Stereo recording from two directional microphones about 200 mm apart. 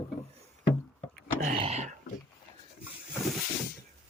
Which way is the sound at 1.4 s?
35° right (ahead or behind).